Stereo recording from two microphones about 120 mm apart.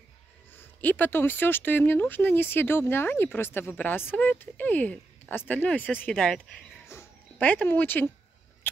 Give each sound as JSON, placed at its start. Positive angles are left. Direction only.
{"t": 0.5, "sound": "speech", "side_deg": 15}
{"t": 6.9, "sound": "dog", "side_deg": 15}